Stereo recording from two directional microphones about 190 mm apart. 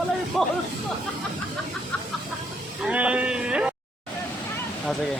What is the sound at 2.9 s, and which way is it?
Speech, 5° right (ahead or behind).